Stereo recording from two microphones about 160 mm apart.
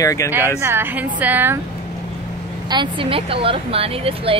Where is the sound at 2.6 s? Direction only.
30° right (ahead or behind).